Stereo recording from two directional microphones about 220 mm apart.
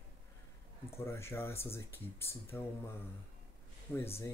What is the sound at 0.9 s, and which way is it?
Speech, 10° left (ahead or behind).